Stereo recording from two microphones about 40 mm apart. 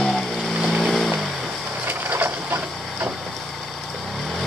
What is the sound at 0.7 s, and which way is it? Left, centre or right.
Vehicle, centre.